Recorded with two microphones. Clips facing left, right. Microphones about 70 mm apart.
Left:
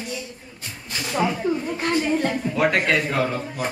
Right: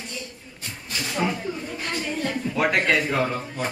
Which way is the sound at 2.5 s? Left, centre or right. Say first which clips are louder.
Even; centre.